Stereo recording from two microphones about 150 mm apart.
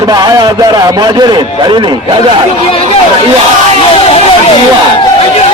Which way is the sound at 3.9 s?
40° left (ahead or behind).